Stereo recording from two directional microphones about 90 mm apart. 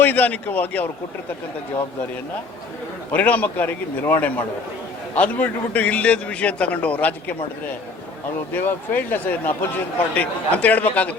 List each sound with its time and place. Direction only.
0.0 s a man's voice: 20° left (ahead or behind)
3.1 s a man's voice: 20° left (ahead or behind)
8.5 s a man's voice: 20° left (ahead or behind)